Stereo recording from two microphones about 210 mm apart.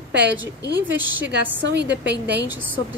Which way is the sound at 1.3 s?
55° right (ahead or behind).